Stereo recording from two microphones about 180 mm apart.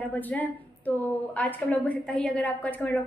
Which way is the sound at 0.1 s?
10° left (ahead or behind).